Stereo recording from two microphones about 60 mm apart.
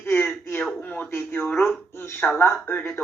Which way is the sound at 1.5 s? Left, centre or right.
Left.